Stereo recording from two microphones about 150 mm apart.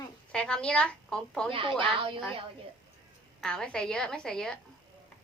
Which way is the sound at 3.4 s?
5° left (ahead or behind).